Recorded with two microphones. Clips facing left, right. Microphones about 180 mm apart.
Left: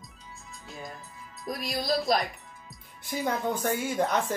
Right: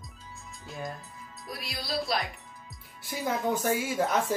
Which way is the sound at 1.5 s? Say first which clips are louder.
Left 7 dB; 45° left (ahead or behind).